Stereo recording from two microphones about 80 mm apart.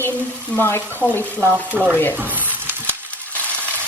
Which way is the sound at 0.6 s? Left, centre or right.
Left.